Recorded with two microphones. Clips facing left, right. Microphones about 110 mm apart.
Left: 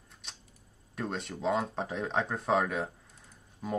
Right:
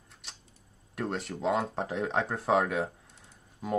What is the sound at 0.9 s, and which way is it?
Speech, centre (ahead or behind).